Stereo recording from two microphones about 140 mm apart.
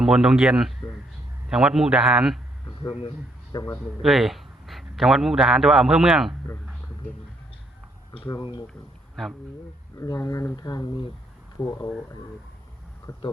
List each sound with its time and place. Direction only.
0.0 s a man's voice: 5° right (ahead or behind)
3.5 s speech: 25° left (ahead or behind)
4.0 s speech: centre (ahead or behind)
8.3 s speech: 30° left (ahead or behind)
9.2 s a man's voice: 5° left (ahead or behind)
10.0 s speech: 25° left (ahead or behind)
13.1 s speech: 25° left (ahead or behind)